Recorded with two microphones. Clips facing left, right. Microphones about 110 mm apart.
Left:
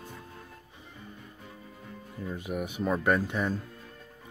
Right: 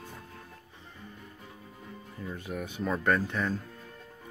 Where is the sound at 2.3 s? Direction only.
15° left (ahead or behind).